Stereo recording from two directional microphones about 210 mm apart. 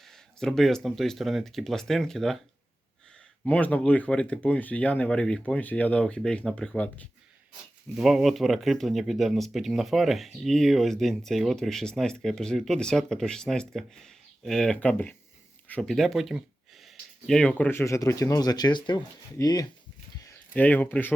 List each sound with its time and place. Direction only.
0.0 s speech: centre (ahead or behind)
3.4 s speech: 5° left (ahead or behind)
20.5 s speech: 10° left (ahead or behind)